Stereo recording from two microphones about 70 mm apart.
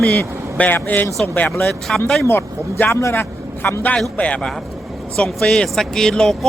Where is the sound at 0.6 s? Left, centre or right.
Left.